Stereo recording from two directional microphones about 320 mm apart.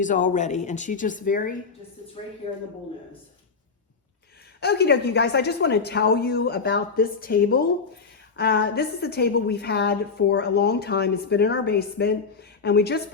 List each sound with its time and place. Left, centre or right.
0.0 s speech: left
4.6 s a woman's voice: left